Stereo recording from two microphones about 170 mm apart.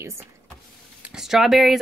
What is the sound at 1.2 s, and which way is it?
Speech, centre (ahead or behind).